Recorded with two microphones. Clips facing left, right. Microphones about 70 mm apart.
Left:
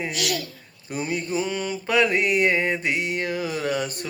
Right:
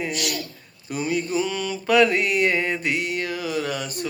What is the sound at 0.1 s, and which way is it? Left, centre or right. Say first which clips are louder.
Speech: left 1 dB; left.